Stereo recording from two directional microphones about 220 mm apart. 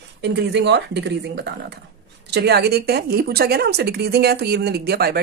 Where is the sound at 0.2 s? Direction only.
50° right (ahead or behind).